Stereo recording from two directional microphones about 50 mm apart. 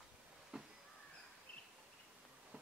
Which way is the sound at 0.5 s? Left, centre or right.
Centre.